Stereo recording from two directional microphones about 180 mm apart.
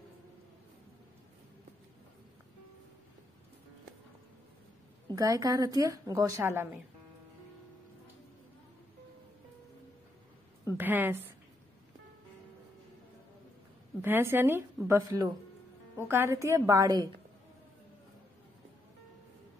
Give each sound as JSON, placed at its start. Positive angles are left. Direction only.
{"t": 5.1, "sound": "a woman's voice", "side_deg": -20}
{"t": 10.8, "sound": "a woman's voice", "side_deg": -10}
{"t": 14.0, "sound": "a woman's voice", "side_deg": -10}